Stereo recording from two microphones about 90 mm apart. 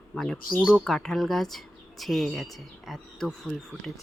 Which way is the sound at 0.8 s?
5° left (ahead or behind).